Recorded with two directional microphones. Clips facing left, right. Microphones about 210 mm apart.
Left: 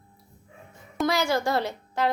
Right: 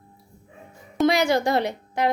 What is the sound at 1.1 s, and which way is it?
Speech, 20° right (ahead or behind).